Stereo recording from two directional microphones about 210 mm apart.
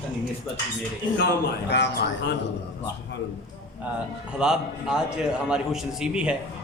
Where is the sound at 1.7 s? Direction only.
50° left (ahead or behind).